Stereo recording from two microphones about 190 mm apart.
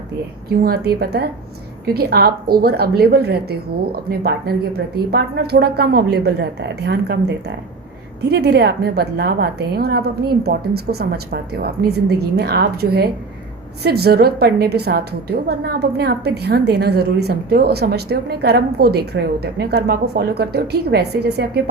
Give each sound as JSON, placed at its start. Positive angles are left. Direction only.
{"t": 0.6, "sound": "a woman's voice", "side_deg": -55}